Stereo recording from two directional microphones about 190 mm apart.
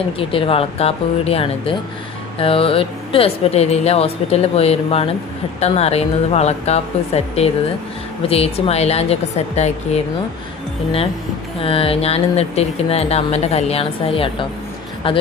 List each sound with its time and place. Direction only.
0.2 s speech: 30° left (ahead or behind)
11.6 s speech: 30° left (ahead or behind)